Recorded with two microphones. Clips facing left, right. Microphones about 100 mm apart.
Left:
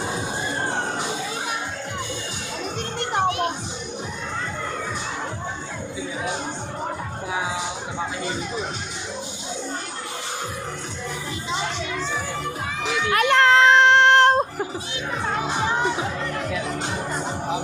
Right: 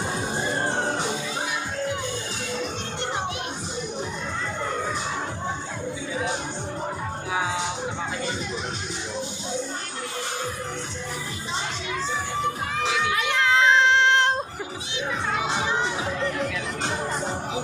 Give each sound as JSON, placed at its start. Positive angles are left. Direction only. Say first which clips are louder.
{"t": 3.2, "sound": "children playing", "louder": "left 12 dB", "side_deg": 55}
{"t": 13.1, "sound": "music", "louder": "left 9 dB", "side_deg": 65}